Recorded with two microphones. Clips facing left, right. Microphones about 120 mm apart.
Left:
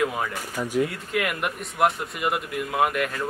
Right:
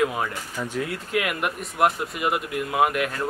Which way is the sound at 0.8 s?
Centre (ahead or behind).